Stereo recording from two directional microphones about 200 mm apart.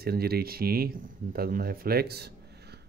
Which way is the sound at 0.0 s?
50° right (ahead or behind).